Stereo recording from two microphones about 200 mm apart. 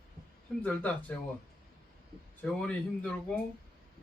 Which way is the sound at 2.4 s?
5° left (ahead or behind).